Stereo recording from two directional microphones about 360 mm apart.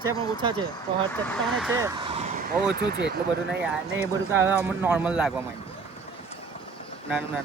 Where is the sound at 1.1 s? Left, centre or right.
Centre.